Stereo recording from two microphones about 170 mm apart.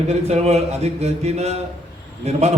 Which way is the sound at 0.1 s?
40° right (ahead or behind).